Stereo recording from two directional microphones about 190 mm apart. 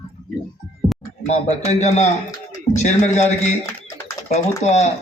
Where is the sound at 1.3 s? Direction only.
35° left (ahead or behind).